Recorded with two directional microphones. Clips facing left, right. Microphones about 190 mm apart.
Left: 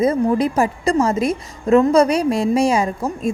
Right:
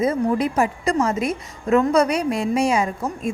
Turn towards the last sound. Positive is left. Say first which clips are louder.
# left 3 dB
turn(degrees=35)  # may be behind; listen again after turning